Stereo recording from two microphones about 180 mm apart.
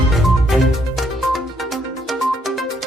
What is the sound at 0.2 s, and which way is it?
Music, centre (ahead or behind).